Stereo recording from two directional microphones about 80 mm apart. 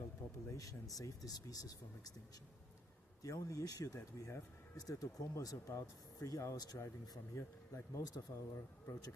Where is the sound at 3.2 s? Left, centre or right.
Left.